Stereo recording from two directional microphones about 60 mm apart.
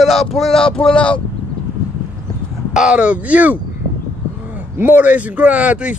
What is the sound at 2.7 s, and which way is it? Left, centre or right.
Speech, centre.